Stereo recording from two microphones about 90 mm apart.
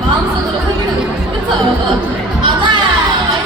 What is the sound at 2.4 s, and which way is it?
Speech, 65° right (ahead or behind).